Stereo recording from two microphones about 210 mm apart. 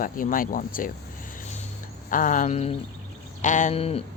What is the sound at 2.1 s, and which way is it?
Speech, 40° left (ahead or behind).